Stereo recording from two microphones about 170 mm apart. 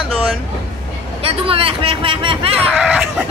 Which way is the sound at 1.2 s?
35° right (ahead or behind).